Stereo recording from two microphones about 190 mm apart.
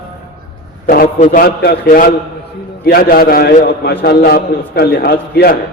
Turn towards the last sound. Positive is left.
turn(degrees=55)  # may be behind; listen again after turning